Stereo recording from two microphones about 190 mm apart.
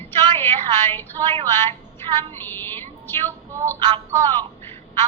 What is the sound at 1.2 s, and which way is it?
Speech, 20° right (ahead or behind).